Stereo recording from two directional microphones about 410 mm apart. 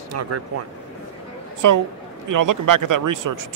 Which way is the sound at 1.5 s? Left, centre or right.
Right.